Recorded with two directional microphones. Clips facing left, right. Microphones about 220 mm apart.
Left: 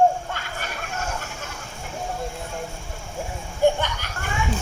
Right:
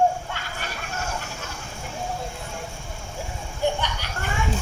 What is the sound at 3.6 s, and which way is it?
Children playing, 50° left (ahead or behind).